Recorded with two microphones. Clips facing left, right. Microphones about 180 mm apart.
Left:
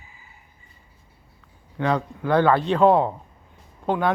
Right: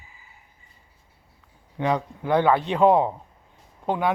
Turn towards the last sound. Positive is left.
turn(degrees=-10)  # may be behind; listen again after turning